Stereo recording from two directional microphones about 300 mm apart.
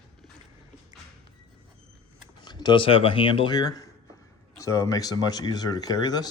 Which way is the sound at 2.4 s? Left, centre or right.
Centre.